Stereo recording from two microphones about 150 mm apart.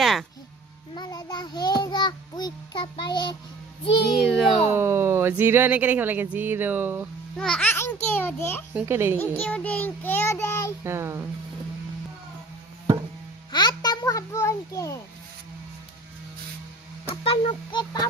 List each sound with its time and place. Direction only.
0.0 s sheep: centre (ahead or behind)
0.9 s child singing: 30° left (ahead or behind)
4.2 s a child's voice: centre (ahead or behind)
4.7 s speech: 15° right (ahead or behind)
7.3 s a child's voice: 5° left (ahead or behind)
8.7 s speech: 10° right (ahead or behind)
9.1 s a child's voice: 15° left (ahead or behind)
10.8 s speech: 20° right (ahead or behind)
13.5 s a child's voice: 30° left (ahead or behind)
17.2 s music: 35° left (ahead or behind)